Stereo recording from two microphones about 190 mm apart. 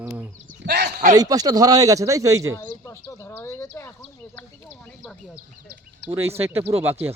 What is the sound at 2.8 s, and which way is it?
Speech, 15° left (ahead or behind).